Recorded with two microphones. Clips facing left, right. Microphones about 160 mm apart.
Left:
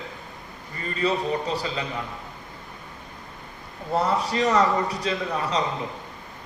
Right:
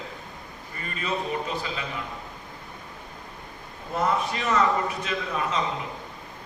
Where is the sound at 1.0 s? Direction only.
35° left (ahead or behind).